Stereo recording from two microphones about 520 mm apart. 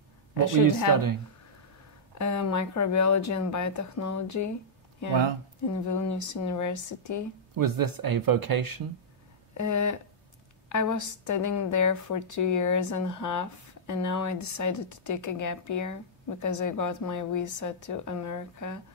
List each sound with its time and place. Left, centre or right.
2.1 s a woman's voice: left
5.7 s a woman's voice: left
7.5 s speech: right
9.5 s a woman's voice: left